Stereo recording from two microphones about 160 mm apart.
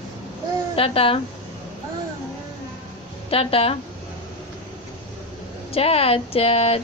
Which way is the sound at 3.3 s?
35° left (ahead or behind).